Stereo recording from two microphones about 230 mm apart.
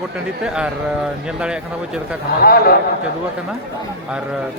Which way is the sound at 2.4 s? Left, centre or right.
Left.